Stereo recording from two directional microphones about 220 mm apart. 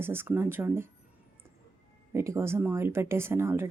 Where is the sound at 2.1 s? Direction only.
10° right (ahead or behind).